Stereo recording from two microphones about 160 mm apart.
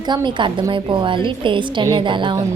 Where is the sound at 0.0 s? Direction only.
25° right (ahead or behind).